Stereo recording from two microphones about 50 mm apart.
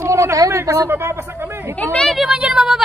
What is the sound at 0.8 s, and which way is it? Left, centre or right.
Speech, right.